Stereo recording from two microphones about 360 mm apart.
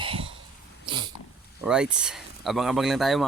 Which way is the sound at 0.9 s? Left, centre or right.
Centre.